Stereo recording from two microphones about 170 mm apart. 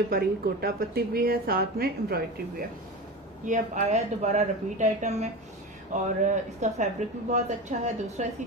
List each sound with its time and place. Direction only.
0.1 s a woman's voice: 60° right (ahead or behind)
3.4 s a woman's voice: 45° right (ahead or behind)